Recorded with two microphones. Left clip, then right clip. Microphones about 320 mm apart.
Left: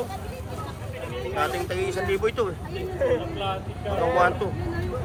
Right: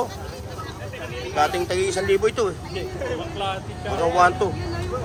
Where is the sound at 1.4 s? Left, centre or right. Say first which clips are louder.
Right 6 dB; centre.